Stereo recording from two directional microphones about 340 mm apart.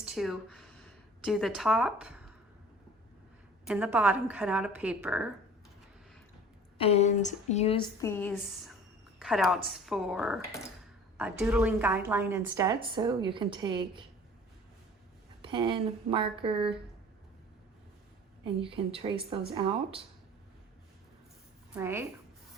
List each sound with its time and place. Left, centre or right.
0.0 s a sound: centre
3.7 s a woman's voice: centre
6.7 s a woman's voice: centre
15.4 s a woman's voice: centre
18.6 s a woman's voice: centre
21.8 s a woman's voice: centre